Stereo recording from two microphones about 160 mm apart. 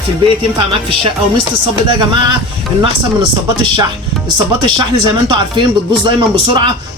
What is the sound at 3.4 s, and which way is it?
Speech, 25° right (ahead or behind).